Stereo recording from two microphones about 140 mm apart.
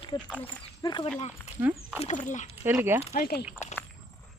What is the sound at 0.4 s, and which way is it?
Speech, 30° left (ahead or behind).